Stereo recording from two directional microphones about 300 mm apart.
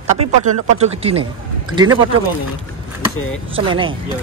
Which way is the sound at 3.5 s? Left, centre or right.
Centre.